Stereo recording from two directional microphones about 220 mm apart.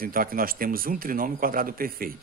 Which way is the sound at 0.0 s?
40° right (ahead or behind).